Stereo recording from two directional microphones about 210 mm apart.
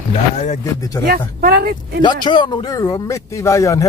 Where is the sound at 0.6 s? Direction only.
15° left (ahead or behind).